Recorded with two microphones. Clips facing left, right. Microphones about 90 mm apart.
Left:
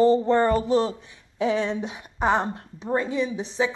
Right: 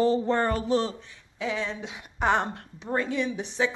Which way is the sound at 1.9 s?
45° left (ahead or behind).